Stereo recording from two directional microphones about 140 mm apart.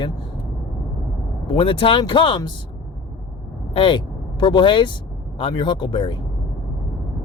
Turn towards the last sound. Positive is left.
turn(degrees=35)  # may be behind; listen again after turning